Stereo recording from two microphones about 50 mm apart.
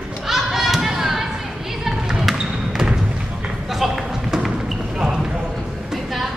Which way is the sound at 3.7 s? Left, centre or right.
Centre.